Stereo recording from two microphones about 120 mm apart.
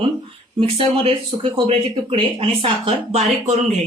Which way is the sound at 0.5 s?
50° right (ahead or behind).